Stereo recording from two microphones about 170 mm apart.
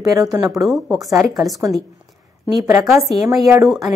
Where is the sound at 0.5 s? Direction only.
Centre (ahead or behind).